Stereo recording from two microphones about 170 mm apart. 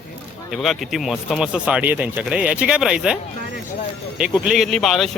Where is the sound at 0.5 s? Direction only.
Centre (ahead or behind).